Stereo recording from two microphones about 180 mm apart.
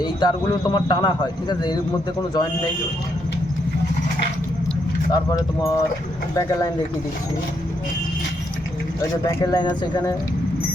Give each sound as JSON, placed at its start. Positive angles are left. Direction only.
{"t": 0.0, "sound": "speech", "side_deg": 25}
{"t": 5.1, "sound": "speech", "side_deg": 20}
{"t": 9.4, "sound": "speech", "side_deg": 20}